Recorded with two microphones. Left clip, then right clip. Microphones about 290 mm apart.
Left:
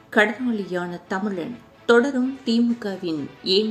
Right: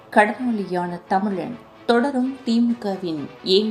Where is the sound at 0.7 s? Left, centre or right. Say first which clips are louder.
Right 5 dB; right.